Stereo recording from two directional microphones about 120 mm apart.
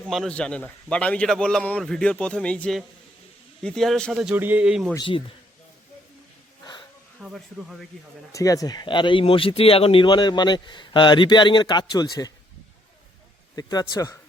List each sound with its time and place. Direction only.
0.3 s a man's voice: 10° left (ahead or behind)
4.4 s a man's voice: 15° right (ahead or behind)
4.9 s speech: 45° left (ahead or behind)
7.2 s speech: centre (ahead or behind)
8.3 s speech: 30° left (ahead or behind)
13.6 s a man's voice: 30° left (ahead or behind)